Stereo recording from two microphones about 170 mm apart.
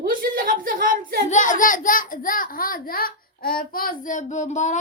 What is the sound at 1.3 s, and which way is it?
A child's voice, 50° left (ahead or behind).